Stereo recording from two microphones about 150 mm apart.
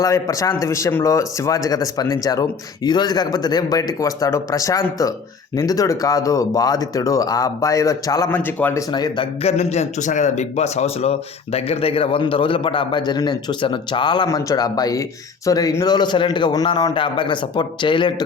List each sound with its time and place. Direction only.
0.0 s speech: 20° left (ahead or behind)
8.9 s speech: 30° left (ahead or behind)
9.4 s a man's voice: 45° left (ahead or behind)